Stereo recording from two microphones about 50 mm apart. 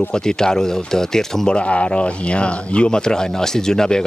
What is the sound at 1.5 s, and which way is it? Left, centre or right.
Speech, left.